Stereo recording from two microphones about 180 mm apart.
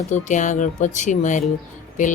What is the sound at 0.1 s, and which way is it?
Speech, 45° left (ahead or behind).